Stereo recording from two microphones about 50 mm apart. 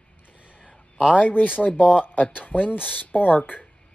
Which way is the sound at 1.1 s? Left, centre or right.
Left.